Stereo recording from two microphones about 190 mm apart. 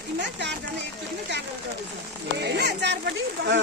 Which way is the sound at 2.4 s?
60° right (ahead or behind).